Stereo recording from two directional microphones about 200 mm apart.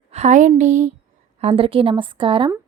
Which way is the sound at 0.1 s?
35° right (ahead or behind).